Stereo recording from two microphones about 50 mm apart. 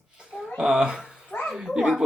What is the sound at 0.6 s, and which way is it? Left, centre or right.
Speech, centre.